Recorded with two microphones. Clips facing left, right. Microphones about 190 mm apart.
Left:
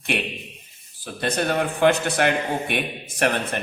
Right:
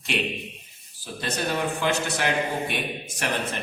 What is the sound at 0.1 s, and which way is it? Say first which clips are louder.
A man's voice: even; 60° left (ahead or behind).